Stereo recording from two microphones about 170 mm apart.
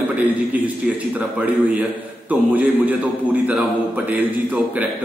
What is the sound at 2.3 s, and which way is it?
Speech, 10° right (ahead or behind).